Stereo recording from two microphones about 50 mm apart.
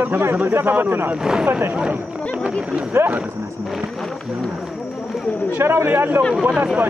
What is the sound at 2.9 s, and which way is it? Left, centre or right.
Speech, right.